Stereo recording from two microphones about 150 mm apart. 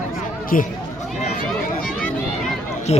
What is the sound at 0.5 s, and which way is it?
Speech, 70° left (ahead or behind).